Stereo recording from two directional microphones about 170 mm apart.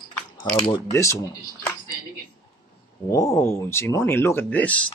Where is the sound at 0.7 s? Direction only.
20° left (ahead or behind).